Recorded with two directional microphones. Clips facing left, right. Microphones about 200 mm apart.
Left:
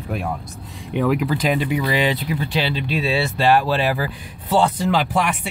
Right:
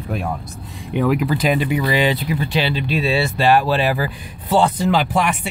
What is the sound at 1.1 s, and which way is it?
Speech, 5° right (ahead or behind).